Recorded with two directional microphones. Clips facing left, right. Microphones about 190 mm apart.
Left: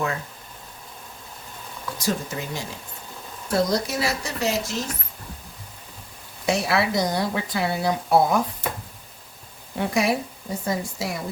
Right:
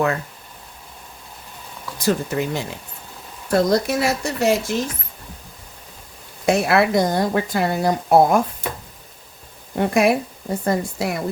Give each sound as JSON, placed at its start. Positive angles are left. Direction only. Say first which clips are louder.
{"t": 2.0, "sound": "speech", "louder": "right 7 dB", "side_deg": -60}
{"t": 3.5, "sound": "speech", "louder": "right 5 dB", "side_deg": -55}
{"t": 6.4, "sound": "speech", "louder": "right 6 dB", "side_deg": -55}
{"t": 9.7, "sound": "speech", "louder": "right 5 dB", "side_deg": -55}